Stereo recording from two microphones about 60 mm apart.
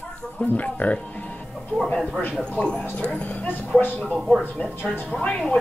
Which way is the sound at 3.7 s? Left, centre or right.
Left.